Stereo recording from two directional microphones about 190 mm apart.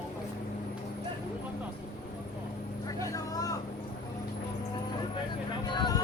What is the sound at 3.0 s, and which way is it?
Vehicle, 20° left (ahead or behind).